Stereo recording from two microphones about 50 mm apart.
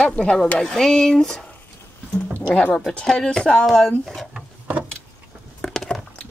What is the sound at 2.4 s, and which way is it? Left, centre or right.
Music, left.